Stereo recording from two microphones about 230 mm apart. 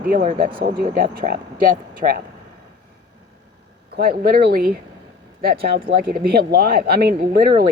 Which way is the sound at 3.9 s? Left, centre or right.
Right.